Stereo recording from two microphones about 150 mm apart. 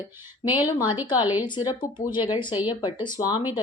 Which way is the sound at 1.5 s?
30° left (ahead or behind).